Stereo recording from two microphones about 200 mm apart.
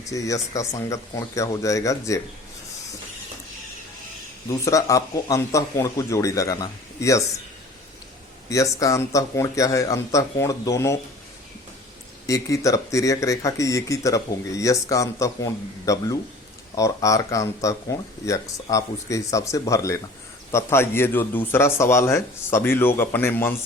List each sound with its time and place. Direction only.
0.0 s speech: 15° left (ahead or behind)
4.4 s speech: 15° left (ahead or behind)
8.4 s speech: 15° left (ahead or behind)
12.2 s speech: 15° left (ahead or behind)